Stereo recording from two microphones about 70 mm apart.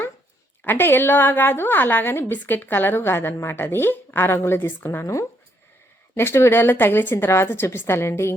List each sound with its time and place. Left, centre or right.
0.6 s a woman's voice: left